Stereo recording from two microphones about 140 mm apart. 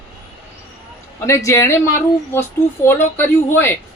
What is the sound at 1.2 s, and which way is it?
A man's voice, 20° left (ahead or behind).